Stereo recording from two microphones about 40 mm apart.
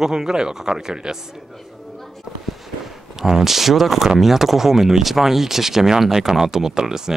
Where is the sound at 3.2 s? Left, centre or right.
Centre.